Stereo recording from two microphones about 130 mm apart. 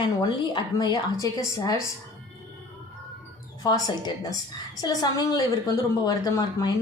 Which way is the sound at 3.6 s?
30° left (ahead or behind).